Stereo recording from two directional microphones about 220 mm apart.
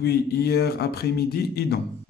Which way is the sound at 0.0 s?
45° left (ahead or behind).